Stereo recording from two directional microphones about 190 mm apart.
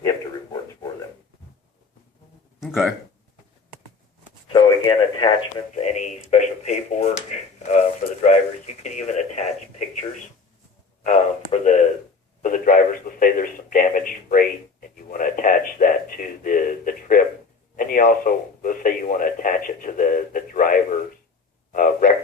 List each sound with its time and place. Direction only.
2.6 s speech: centre (ahead or behind)
4.5 s radio: 25° left (ahead or behind)
5.7 s speech: 40° left (ahead or behind)
11.0 s speech: 35° left (ahead or behind)
12.4 s a sound: 40° left (ahead or behind)
17.7 s speech: 45° left (ahead or behind)
21.7 s a sound: 45° left (ahead or behind)